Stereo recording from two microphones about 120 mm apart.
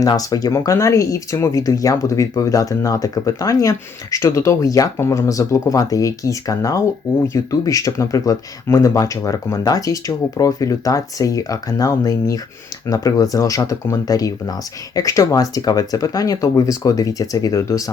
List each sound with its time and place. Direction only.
0.0 s speech: 30° left (ahead or behind)